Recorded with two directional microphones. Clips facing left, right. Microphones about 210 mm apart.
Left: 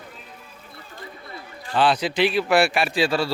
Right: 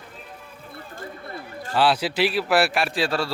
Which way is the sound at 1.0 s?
45° right (ahead or behind).